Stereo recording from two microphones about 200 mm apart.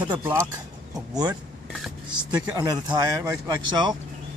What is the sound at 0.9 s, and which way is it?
Speech, 20° right (ahead or behind).